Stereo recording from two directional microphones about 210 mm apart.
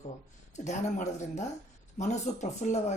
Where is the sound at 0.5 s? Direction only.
35° left (ahead or behind).